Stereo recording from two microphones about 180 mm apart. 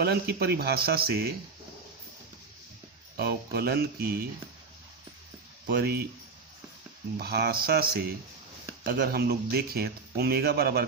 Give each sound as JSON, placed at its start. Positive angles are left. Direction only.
{"t": 0.0, "sound": "speech", "side_deg": -60}
{"t": 3.2, "sound": "speech", "side_deg": -60}
{"t": 5.6, "sound": "speech", "side_deg": -60}
{"t": 7.2, "sound": "speech", "side_deg": -60}